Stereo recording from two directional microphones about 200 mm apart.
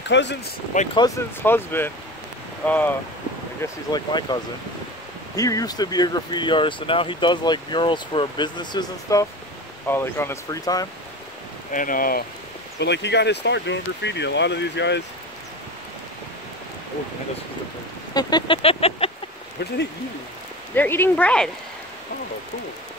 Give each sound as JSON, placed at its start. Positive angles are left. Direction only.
{"t": 0.1, "sound": "speech", "side_deg": 60}
{"t": 0.9, "sound": "speech", "side_deg": 15}
{"t": 3.6, "sound": "speech", "side_deg": 20}
{"t": 11.7, "sound": "speech", "side_deg": 45}
{"t": 12.7, "sound": "speech", "side_deg": 60}
{"t": 18.1, "sound": "vehicle", "side_deg": 25}
{"t": 19.6, "sound": "speech", "side_deg": 55}
{"t": 20.7, "sound": "speech", "side_deg": 10}